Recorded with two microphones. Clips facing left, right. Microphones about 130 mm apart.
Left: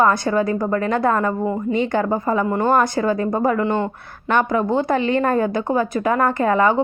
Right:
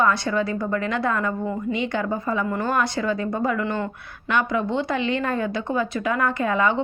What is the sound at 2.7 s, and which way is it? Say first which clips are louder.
Speech: left 5 dB; 45° left (ahead or behind).